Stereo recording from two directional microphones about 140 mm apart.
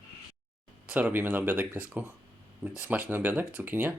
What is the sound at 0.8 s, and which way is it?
Speech, 10° right (ahead or behind).